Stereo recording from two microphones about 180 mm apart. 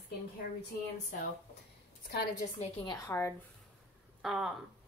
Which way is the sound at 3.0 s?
15° left (ahead or behind).